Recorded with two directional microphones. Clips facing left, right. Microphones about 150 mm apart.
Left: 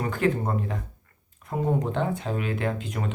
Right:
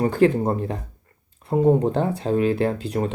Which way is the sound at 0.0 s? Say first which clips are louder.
Right 7 dB; 35° right (ahead or behind).